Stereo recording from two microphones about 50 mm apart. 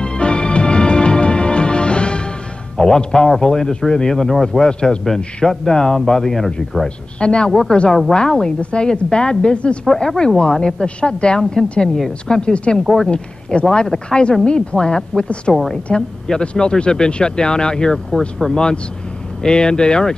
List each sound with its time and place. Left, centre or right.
0.0 s music: centre
2.8 s speech: centre
5.0 s speech: centre
7.2 s a woman's voice: centre
12.8 s a woman's voice: centre
13.1 s speech: centre